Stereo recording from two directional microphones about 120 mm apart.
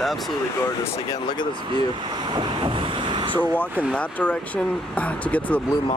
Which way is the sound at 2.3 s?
40° right (ahead or behind).